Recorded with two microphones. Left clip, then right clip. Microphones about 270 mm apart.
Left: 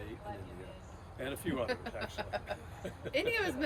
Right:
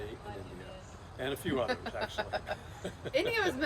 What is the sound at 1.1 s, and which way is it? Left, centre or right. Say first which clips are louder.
Speech: right 4 dB; centre.